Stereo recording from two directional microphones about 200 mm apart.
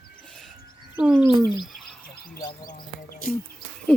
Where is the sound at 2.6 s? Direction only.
45° left (ahead or behind).